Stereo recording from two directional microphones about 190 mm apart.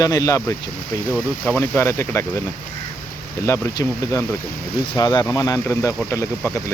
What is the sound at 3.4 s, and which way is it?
Speech, 15° left (ahead or behind).